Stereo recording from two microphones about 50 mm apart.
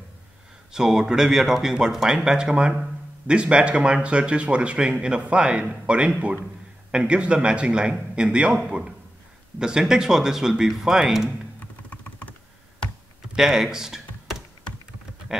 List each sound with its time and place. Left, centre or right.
0.7 s speech: centre
11.6 s computer keyboard: left
13.3 s speech: centre